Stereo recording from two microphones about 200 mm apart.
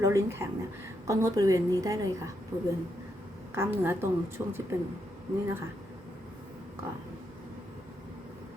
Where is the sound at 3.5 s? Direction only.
10° right (ahead or behind).